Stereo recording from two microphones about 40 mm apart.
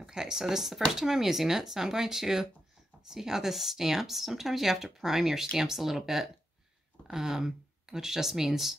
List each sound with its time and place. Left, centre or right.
0.0 s speech: centre